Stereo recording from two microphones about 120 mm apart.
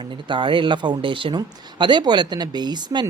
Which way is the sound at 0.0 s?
40° right (ahead or behind).